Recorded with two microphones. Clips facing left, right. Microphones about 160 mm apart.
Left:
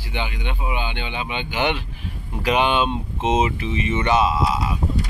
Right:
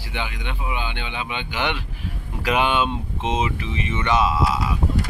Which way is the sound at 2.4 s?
5° right (ahead or behind).